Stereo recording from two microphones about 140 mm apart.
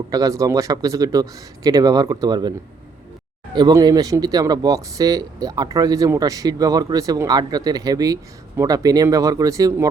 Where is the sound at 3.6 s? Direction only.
30° right (ahead or behind).